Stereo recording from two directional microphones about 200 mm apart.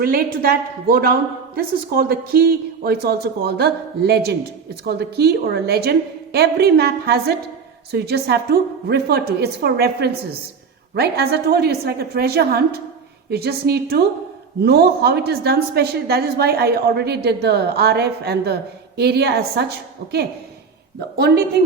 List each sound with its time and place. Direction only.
0.0 s a woman's voice: 50° right (ahead or behind)